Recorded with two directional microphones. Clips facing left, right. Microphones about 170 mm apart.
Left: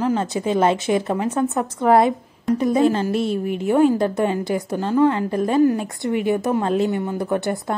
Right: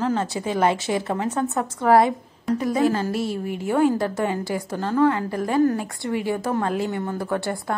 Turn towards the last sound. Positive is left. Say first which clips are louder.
# left 3 dB
turn(degrees=20)  # may be behind; listen again after turning